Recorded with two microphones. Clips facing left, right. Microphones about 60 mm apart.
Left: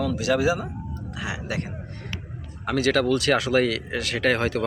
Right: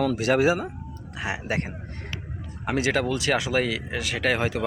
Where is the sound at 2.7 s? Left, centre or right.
Centre.